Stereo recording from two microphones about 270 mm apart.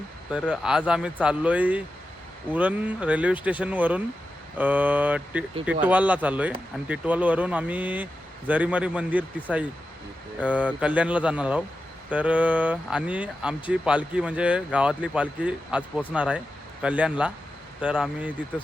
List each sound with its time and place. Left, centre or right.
0.3 s speech: centre